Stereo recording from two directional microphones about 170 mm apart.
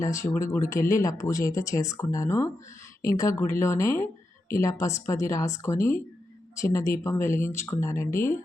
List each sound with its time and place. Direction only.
0.0 s speech: 20° left (ahead or behind)